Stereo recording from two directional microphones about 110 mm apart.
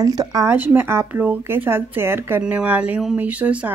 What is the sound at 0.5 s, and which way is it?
Speech, 20° right (ahead or behind).